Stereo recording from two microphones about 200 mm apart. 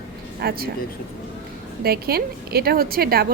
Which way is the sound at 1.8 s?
50° right (ahead or behind).